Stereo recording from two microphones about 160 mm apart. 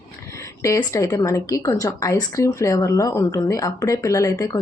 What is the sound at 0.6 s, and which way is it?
A woman's voice, 20° left (ahead or behind).